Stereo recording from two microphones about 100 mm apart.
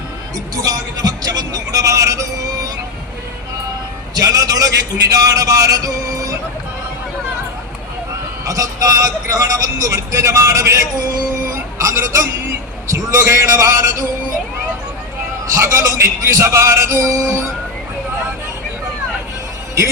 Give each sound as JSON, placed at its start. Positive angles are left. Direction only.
{"t": 0.5, "sound": "speech", "side_deg": -40}
{"t": 4.1, "sound": "speech", "side_deg": -35}
{"t": 8.4, "sound": "speech", "side_deg": -35}
{"t": 15.5, "sound": "speech", "side_deg": -30}